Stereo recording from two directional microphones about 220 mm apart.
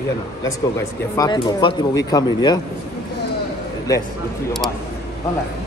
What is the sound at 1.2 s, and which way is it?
Speech, 20° left (ahead or behind).